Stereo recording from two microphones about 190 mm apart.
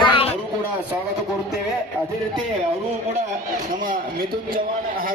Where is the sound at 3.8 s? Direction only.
50° right (ahead or behind).